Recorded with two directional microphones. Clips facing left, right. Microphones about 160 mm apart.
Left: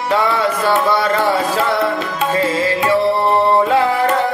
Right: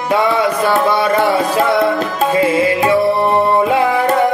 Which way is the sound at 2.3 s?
15° right (ahead or behind).